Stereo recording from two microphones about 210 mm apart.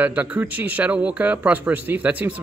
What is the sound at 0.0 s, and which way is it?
Speech, 10° right (ahead or behind).